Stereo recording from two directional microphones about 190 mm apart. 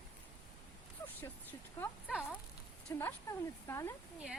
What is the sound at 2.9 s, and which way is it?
Speech, 10° left (ahead or behind).